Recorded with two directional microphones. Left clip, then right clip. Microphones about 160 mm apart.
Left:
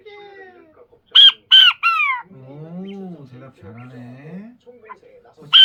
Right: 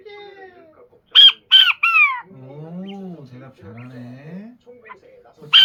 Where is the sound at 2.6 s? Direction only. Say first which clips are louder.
Left 1 dB; 5° left (ahead or behind).